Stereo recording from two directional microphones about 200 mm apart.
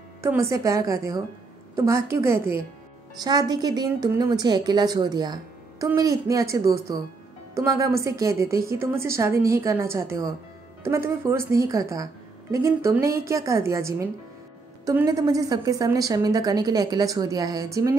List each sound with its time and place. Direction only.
0.2 s speech: 15° right (ahead or behind)